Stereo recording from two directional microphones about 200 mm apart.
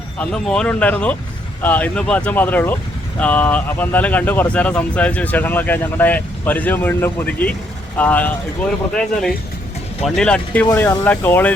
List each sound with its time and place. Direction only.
0.2 s speech: 5° left (ahead or behind)
10.0 s speech: 5° left (ahead or behind)